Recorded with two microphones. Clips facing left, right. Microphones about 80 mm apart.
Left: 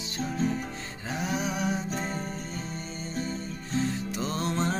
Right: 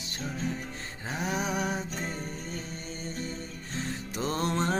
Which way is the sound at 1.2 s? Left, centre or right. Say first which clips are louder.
Even; right.